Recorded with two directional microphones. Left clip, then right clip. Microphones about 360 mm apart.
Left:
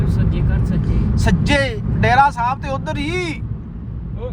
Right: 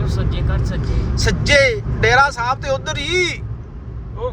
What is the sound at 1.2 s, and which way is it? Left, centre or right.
Speech, centre.